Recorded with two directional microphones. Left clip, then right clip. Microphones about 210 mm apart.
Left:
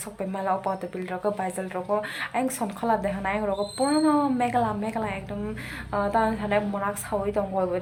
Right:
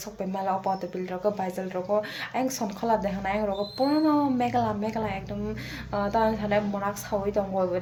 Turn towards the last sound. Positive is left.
turn(degrees=-5)  # may be behind; listen again after turning